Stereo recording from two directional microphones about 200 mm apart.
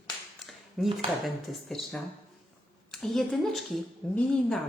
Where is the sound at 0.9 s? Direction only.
Centre (ahead or behind).